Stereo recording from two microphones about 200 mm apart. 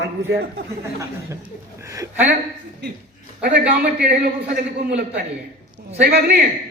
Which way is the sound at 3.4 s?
55° right (ahead or behind).